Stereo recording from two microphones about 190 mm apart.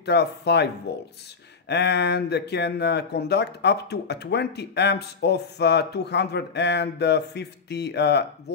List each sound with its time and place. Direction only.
0.0 s speech: 60° left (ahead or behind)